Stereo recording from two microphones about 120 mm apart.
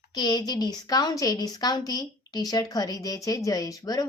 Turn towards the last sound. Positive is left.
turn(degrees=30)  # may be behind; listen again after turning